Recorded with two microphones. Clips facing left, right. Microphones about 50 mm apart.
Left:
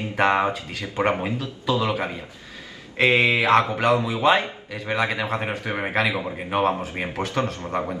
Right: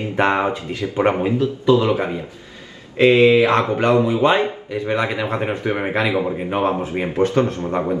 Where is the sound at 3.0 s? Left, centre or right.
Left.